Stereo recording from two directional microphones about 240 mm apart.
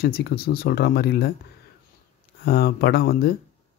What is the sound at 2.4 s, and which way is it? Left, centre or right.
Speech, left.